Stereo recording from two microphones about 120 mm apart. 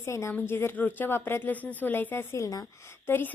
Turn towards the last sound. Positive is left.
turn(degrees=20)  # may be behind; listen again after turning